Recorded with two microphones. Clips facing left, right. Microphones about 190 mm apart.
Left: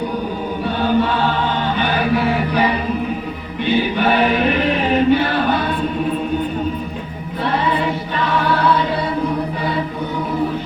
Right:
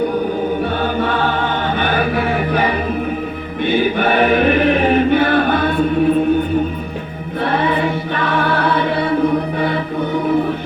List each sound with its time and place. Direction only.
0.6 s choir: 50° right (ahead or behind)
1.8 s chant: 50° right (ahead or behind)
3.6 s choir: 50° right (ahead or behind)
7.4 s choir: 55° right (ahead or behind)